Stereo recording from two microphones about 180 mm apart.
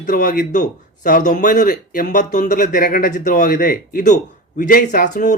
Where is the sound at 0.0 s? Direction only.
45° left (ahead or behind).